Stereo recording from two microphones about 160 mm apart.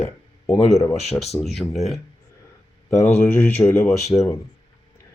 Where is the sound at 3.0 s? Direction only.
15° left (ahead or behind).